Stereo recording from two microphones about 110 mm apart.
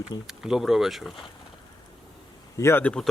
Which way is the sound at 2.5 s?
25° left (ahead or behind).